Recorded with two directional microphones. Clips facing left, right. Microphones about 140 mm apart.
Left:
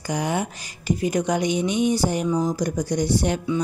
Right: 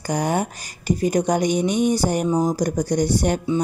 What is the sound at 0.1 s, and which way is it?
Speech, 45° right (ahead or behind).